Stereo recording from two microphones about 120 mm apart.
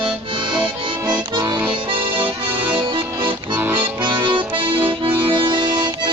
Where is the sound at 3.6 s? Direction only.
15° right (ahead or behind).